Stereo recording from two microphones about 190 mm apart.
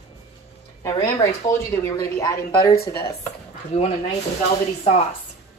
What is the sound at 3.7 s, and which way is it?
Speech, 35° left (ahead or behind).